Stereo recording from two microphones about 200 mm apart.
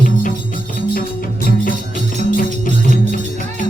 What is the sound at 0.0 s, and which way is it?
Music, 40° left (ahead or behind).